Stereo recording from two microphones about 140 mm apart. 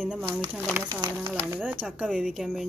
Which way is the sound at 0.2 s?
30° right (ahead or behind).